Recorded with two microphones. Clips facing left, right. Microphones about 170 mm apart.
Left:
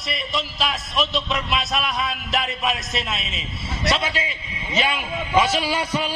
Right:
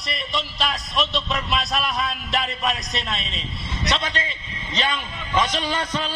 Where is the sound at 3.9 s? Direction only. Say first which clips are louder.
Left 1 dB; 5° left (ahead or behind).